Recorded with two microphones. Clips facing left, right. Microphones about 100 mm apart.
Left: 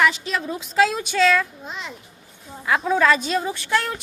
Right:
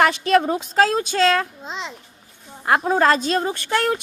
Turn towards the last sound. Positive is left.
turn(degrees=-65)  # may be behind; listen again after turning